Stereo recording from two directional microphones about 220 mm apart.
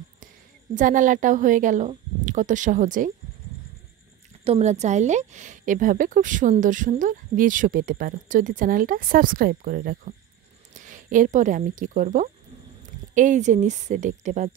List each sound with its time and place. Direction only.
0.7 s speech: 35° right (ahead or behind)
4.5 s speech: 30° right (ahead or behind)